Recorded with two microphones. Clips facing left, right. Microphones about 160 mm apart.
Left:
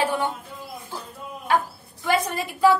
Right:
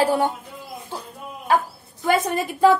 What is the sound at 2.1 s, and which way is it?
Speech, 50° right (ahead or behind).